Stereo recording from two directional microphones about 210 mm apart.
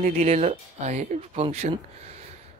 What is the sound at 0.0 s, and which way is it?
Speech, 30° right (ahead or behind).